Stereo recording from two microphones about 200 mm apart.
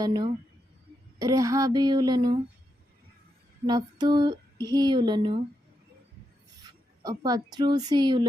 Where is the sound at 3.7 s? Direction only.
20° right (ahead or behind).